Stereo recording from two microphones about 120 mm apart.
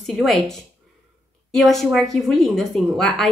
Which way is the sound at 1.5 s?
Centre (ahead or behind).